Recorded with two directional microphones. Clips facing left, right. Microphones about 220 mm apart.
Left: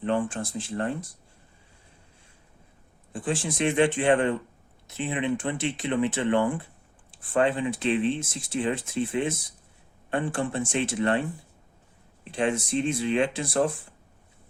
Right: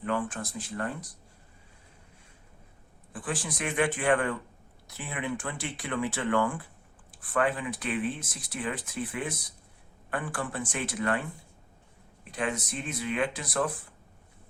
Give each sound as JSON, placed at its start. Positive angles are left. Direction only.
{"t": 0.0, "sound": "speech", "side_deg": 30}
{"t": 3.1, "sound": "speech", "side_deg": 25}
{"t": 12.3, "sound": "speech", "side_deg": 30}